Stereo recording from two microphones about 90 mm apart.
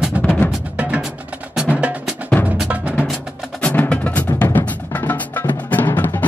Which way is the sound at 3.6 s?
15° left (ahead or behind).